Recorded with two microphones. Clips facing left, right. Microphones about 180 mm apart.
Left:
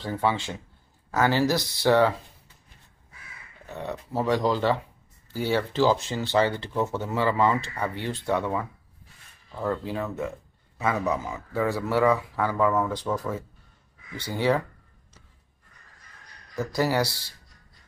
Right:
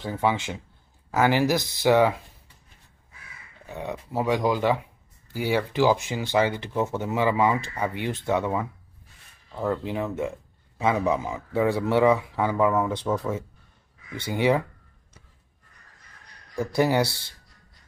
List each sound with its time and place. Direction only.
0.0 s speech: 15° right (ahead or behind)
3.6 s speech: 15° right (ahead or behind)
16.7 s speech: 20° right (ahead or behind)